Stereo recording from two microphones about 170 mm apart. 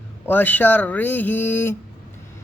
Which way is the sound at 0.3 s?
10° left (ahead or behind).